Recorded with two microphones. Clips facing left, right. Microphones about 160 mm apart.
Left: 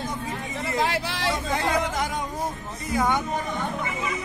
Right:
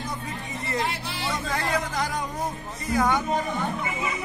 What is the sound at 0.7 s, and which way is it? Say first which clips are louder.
Speech: left 4 dB; 90° left.